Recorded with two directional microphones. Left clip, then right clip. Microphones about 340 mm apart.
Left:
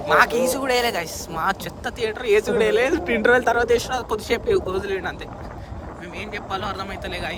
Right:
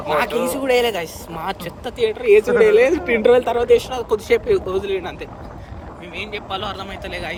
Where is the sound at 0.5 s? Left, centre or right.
Centre.